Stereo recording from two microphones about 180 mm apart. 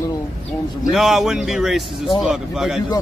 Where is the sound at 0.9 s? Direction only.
Centre (ahead or behind).